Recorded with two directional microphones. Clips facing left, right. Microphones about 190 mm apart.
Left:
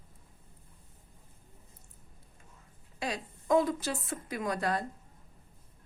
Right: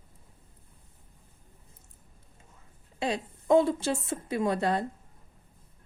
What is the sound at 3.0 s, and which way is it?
A woman's voice, 25° right (ahead or behind).